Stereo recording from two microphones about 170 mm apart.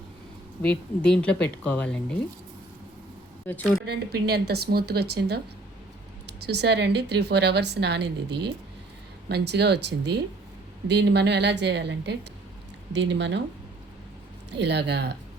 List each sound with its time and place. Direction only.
0.6 s speech: 5° left (ahead or behind)
3.4 s speech: 10° left (ahead or behind)
3.8 s a woman's voice: 70° right (ahead or behind)
6.4 s a woman's voice: 80° right
14.5 s a woman's voice: 85° right